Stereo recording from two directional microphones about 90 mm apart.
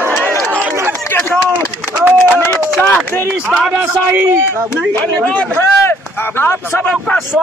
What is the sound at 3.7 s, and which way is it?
A man's voice, 20° right (ahead or behind).